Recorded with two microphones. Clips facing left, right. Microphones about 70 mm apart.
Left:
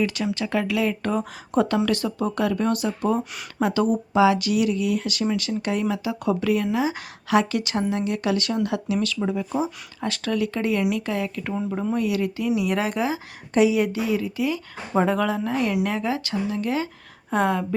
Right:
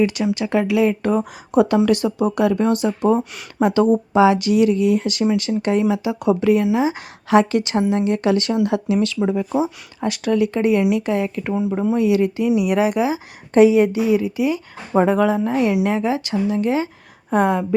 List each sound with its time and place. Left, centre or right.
0.0 s speech: right
9.6 s speech: centre
12.5 s speech: centre
13.5 s speech: right; by 17.7 s centre